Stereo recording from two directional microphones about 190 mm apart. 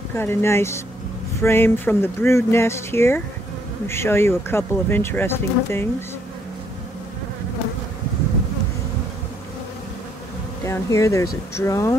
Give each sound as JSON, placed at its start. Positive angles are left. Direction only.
{"t": 0.1, "sound": "speech", "side_deg": 10}
{"t": 10.6, "sound": "speech", "side_deg": 15}